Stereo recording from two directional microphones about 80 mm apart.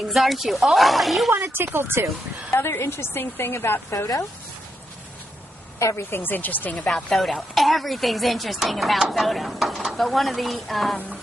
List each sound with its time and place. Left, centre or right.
0.1 s speech: centre
1.3 s speech: right
2.7 s a woman's voice: left
5.8 s a woman's voice: left
7.1 s speech: centre